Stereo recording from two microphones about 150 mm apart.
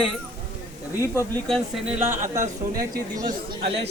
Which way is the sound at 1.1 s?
20° left (ahead or behind).